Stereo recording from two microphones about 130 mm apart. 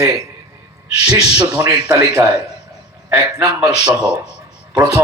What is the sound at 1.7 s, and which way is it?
Speech, 25° right (ahead or behind).